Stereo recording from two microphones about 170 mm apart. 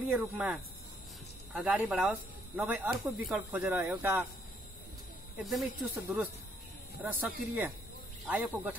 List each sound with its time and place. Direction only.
0.1 s speech: 5° right (ahead or behind)
5.4 s speech: centre (ahead or behind)
5.9 s speech: 15° right (ahead or behind)
7.0 s speech: 5° right (ahead or behind)